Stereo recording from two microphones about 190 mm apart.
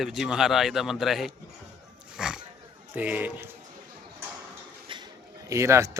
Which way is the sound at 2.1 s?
5° right (ahead or behind).